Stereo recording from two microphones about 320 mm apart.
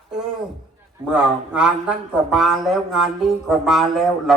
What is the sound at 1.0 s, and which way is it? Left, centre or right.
A man's voice, centre.